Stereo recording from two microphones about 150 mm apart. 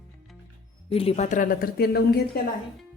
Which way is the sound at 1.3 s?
65° left (ahead or behind).